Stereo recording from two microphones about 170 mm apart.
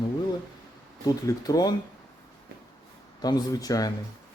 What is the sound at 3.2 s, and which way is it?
Speech, 20° left (ahead or behind).